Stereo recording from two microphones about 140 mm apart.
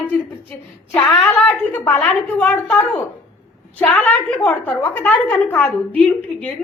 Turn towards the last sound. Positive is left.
turn(degrees=10)  # may be behind; listen again after turning